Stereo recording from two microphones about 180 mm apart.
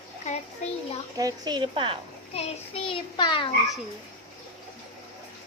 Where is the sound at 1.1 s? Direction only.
20° right (ahead or behind).